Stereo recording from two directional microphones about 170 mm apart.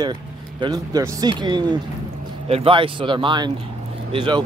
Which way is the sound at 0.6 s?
20° right (ahead or behind).